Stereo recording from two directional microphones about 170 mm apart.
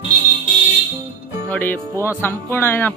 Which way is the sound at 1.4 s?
10° left (ahead or behind).